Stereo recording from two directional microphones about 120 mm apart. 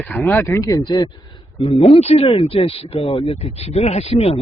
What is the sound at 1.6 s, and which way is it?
Speech, 50° left (ahead or behind).